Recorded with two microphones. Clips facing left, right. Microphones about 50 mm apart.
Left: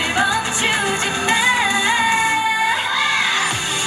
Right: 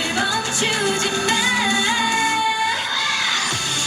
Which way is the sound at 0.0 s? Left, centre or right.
Left.